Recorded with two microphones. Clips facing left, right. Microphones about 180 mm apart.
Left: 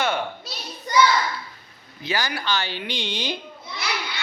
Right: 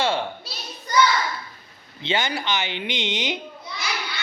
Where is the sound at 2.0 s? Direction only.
25° right (ahead or behind).